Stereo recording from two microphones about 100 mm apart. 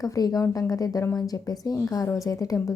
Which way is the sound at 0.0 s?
40° left (ahead or behind).